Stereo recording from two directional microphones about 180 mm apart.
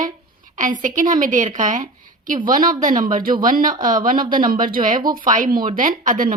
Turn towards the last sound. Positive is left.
turn(degrees=-50)  # may be behind; listen again after turning